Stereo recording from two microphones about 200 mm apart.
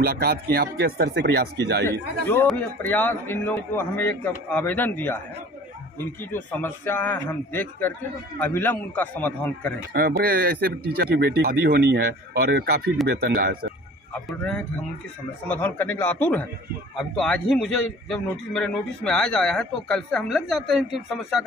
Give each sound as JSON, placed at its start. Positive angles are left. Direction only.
{"t": 0.0, "sound": "speech", "side_deg": -50}
{"t": 1.9, "sound": "a man's voice", "side_deg": 10}
{"t": 9.9, "sound": "speech", "side_deg": -50}
{"t": 15.4, "sound": "a man's voice", "side_deg": 10}